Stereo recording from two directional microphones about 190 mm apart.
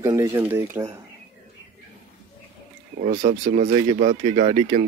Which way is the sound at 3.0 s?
40° right (ahead or behind).